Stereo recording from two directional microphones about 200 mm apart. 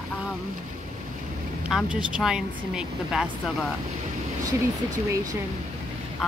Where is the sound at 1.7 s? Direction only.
5° right (ahead or behind).